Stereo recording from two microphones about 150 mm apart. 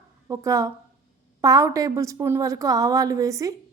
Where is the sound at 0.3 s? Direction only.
20° right (ahead or behind).